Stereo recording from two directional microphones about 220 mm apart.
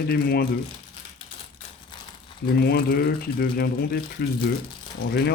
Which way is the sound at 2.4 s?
45° left (ahead or behind).